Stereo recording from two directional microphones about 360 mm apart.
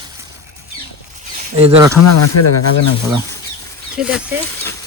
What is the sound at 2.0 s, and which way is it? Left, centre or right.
Speech, left.